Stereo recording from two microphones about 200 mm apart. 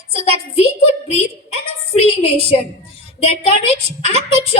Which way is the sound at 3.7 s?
30° right (ahead or behind).